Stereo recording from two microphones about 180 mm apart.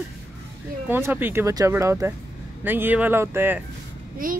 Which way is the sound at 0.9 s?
10° right (ahead or behind).